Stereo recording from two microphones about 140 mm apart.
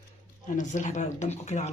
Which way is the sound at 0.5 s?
60° left (ahead or behind).